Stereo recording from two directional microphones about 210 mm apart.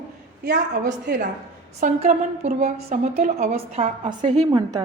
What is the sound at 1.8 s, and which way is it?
A woman's voice, 30° right (ahead or behind).